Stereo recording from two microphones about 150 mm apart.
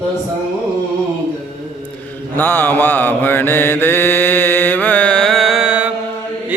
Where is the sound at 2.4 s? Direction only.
15° left (ahead or behind).